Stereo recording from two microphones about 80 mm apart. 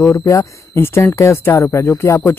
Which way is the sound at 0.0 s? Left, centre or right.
Left.